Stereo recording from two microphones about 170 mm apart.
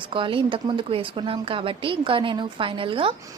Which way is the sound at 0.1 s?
30° right (ahead or behind).